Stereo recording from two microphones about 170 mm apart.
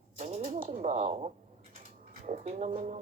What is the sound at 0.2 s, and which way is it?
Typewriter, 40° right (ahead or behind).